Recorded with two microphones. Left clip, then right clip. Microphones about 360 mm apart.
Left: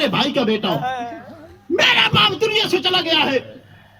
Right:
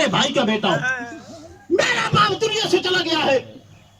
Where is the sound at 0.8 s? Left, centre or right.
Centre.